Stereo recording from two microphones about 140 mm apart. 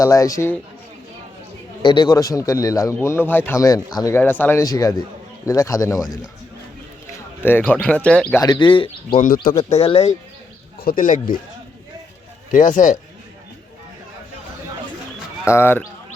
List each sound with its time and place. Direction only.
0.0 s a man's voice: 25° left (ahead or behind)
1.8 s a man's voice: 35° left (ahead or behind)
4.2 s speech: 15° left (ahead or behind)
4.6 s a man's voice: 25° left (ahead or behind)
7.4 s speech: 15° left (ahead or behind)
8.4 s speech: 35° left (ahead or behind)
9.7 s speech: 45° left (ahead or behind)
10.8 s speech: 85° left
12.5 s a man's voice: 65° left (ahead or behind)
15.4 s speech: 15° left (ahead or behind)